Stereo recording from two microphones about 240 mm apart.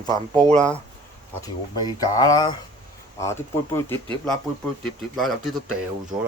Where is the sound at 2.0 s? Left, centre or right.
Centre.